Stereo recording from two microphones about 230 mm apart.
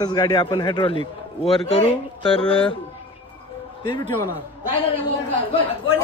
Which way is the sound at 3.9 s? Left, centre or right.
Left.